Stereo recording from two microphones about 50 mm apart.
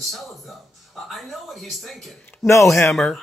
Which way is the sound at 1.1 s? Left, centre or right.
Centre.